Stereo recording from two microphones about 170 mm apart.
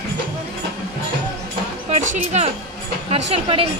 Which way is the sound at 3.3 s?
35° right (ahead or behind).